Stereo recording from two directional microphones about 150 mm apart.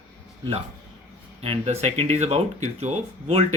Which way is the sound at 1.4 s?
40° right (ahead or behind).